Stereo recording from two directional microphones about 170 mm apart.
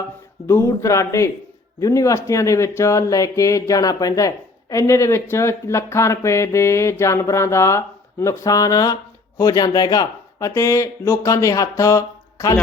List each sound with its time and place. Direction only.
0.4 s a man's voice: 15° left (ahead or behind)